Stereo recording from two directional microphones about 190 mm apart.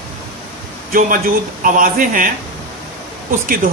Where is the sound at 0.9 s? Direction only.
45° right (ahead or behind).